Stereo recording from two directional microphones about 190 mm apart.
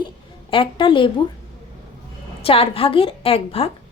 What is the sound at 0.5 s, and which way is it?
Speech, 25° left (ahead or behind).